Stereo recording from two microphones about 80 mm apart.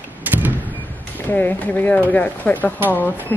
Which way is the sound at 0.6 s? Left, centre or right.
Left.